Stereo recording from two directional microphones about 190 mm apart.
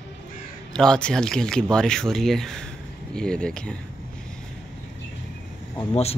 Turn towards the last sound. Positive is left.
turn(degrees=30)  # may be behind; listen again after turning